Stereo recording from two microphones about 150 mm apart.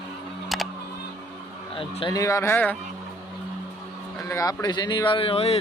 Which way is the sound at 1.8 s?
35° left (ahead or behind).